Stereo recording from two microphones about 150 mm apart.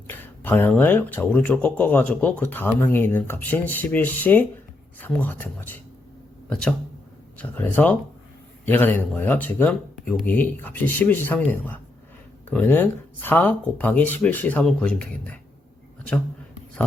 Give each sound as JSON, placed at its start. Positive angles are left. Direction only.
{"t": 0.1, "sound": "speech", "side_deg": 15}